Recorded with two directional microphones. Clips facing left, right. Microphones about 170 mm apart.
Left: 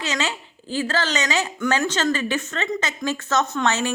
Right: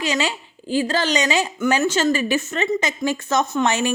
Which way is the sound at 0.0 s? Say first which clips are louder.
Right 3 dB; 10° right (ahead or behind).